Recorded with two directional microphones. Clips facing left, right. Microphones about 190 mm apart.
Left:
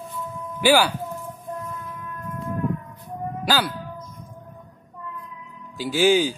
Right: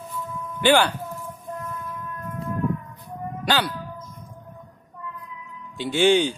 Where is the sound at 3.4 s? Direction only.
Centre (ahead or behind).